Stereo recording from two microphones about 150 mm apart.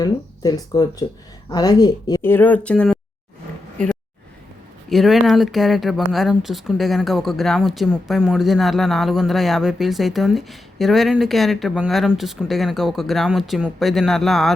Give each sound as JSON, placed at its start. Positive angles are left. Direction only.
{"t": 0.0, "sound": "speech", "side_deg": 25}
{"t": 2.2, "sound": "speech", "side_deg": 15}
{"t": 4.9, "sound": "speech", "side_deg": 0}